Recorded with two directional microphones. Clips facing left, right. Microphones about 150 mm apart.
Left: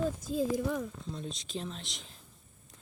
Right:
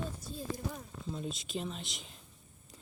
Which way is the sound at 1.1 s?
5° right (ahead or behind).